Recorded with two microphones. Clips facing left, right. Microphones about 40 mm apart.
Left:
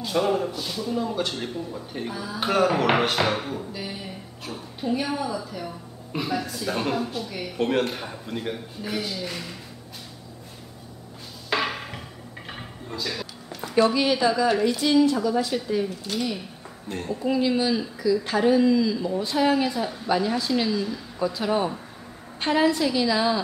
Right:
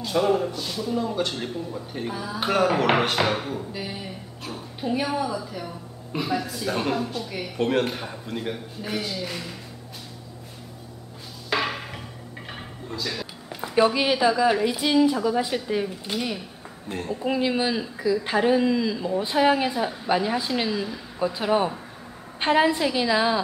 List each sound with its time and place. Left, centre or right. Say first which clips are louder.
0.0 s a man's voice: right 1 dB; centre
11.5 s a sound: even; centre
13.6 s a woman's voice: even; centre
16.9 s a man's voice: even; centre
17.2 s speech: left 1 dB; right